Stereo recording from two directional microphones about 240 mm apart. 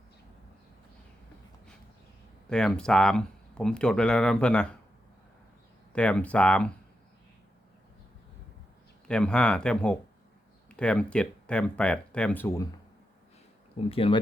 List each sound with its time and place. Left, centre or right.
2.5 s speech: centre
5.9 s speech: centre
9.0 s speech: centre
13.9 s speech: left